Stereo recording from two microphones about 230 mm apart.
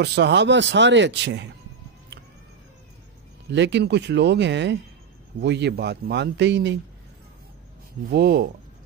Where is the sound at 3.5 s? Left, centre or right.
Right.